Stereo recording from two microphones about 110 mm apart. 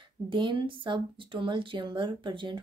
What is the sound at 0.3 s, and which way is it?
Speech, 50° right (ahead or behind).